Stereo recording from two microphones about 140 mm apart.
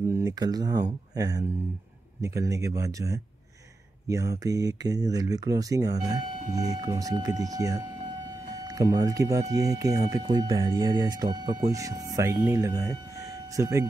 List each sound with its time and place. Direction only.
0.1 s speech: 25° right (ahead or behind)